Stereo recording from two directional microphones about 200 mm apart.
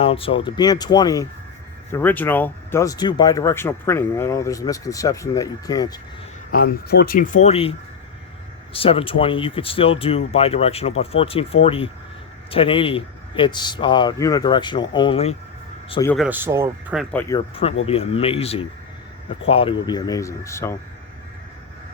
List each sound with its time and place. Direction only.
0.0 s speech: 30° left (ahead or behind)
6.5 s speech: 50° left (ahead or behind); by 7.7 s 30° left (ahead or behind)
8.7 s speech: 30° left (ahead or behind)
16.1 s speech: 5° right (ahead or behind)
17.0 s speech: 5° left (ahead or behind)
17.2 s speech: 25° left (ahead or behind)